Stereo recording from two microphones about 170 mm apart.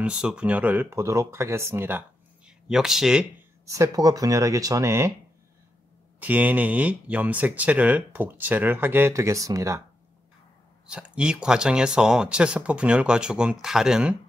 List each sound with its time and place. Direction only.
0.0 s speech: 5° right (ahead or behind)
3.6 s speech: 20° right (ahead or behind)
6.1 s speech: 10° right (ahead or behind)
10.9 s speech: 5° right (ahead or behind)